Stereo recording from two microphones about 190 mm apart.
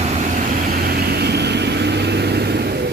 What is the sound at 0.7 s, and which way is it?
Vehicle, 55° right (ahead or behind).